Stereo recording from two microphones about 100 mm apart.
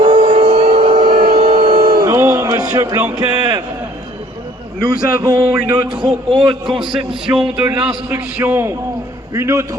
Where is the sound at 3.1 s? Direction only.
45° right (ahead or behind).